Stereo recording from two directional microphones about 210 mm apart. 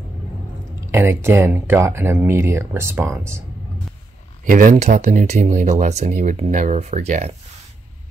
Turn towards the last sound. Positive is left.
turn(degrees=-35)  # may be behind; listen again after turning